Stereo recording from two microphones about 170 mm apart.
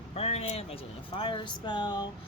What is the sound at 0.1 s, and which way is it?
Speech, 40° left (ahead or behind).